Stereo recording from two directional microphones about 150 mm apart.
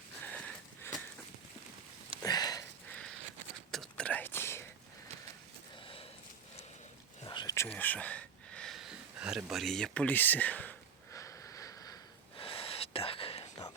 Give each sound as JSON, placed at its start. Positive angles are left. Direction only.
{"t": 0.2, "sound": "wheeze", "side_deg": 10}
{"t": 2.2, "sound": "sniff", "side_deg": 25}
{"t": 3.7, "sound": "whispering", "side_deg": 5}
{"t": 5.8, "sound": "a sound", "side_deg": 35}
{"t": 7.3, "sound": "whispering", "side_deg": 30}
{"t": 7.5, "sound": "a sound", "side_deg": 15}
{"t": 12.4, "sound": "whispering", "side_deg": 40}